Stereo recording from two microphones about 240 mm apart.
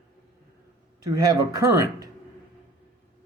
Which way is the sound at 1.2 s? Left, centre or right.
Centre.